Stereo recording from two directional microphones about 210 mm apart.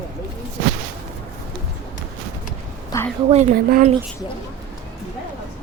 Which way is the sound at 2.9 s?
15° left (ahead or behind).